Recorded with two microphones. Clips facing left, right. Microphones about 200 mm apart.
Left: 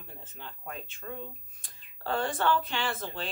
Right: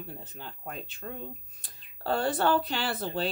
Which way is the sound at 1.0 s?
40° right (ahead or behind).